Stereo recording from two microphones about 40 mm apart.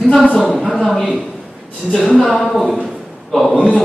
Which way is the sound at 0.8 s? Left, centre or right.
Centre.